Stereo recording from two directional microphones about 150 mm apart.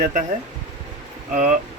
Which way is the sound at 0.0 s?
55° right (ahead or behind).